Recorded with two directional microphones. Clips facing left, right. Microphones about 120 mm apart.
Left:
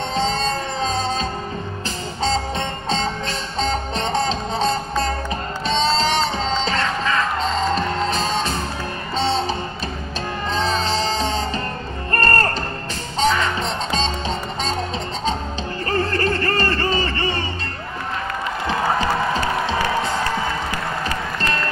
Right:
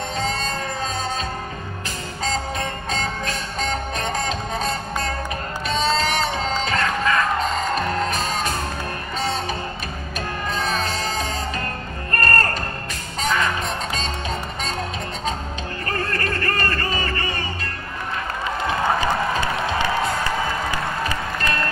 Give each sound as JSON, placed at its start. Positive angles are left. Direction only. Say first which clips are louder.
{"t": 0.1, "sound": "emergency vehicle", "louder": "left 6 dB", "side_deg": 30}
{"t": 2.2, "sound": "music", "louder": "left 3 dB", "side_deg": 30}
{"t": 15.9, "sound": "a sound", "louder": "left 5 dB", "side_deg": 30}
{"t": 19.6, "sound": "music", "louder": "left 1 dB", "side_deg": 25}